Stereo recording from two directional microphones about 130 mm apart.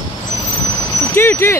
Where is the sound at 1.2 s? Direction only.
20° left (ahead or behind).